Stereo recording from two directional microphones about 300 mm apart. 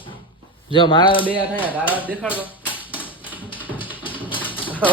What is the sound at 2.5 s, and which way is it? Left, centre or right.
Typewriter, centre.